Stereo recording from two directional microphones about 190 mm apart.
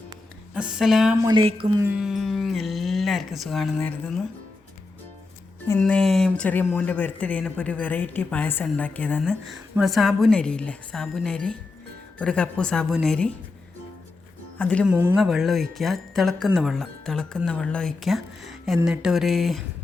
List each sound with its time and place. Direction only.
0.5 s speech: 5° right (ahead or behind)
1.2 s speech: 25° right (ahead or behind)
1.8 s speech: 5° right (ahead or behind)
5.8 s speech: 5° left (ahead or behind)
14.6 s speech: 5° left (ahead or behind)
14.8 s speech: 5° right (ahead or behind)